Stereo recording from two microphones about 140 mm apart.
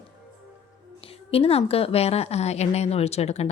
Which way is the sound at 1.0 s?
45° left (ahead or behind).